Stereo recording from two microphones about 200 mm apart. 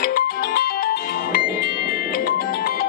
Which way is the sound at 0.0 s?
50° left (ahead or behind).